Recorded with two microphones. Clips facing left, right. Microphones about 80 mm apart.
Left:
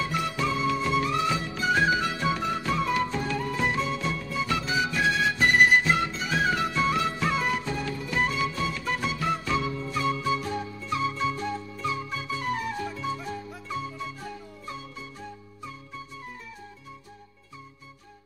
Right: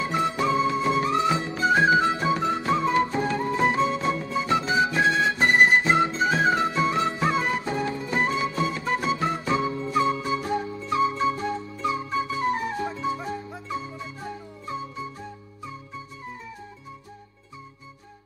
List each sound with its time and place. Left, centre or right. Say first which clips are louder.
0.0 s music: right 4 dB; right